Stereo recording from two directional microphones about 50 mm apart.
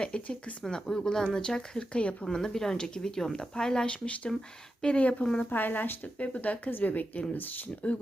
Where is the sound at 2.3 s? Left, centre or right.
Centre.